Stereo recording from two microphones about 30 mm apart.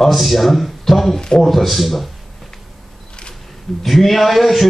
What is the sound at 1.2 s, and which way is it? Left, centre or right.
Speech, left.